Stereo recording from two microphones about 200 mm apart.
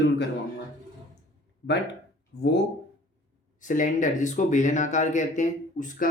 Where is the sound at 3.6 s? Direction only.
40° left (ahead or behind).